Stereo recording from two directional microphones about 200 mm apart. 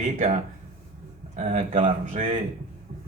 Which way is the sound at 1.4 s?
35° right (ahead or behind).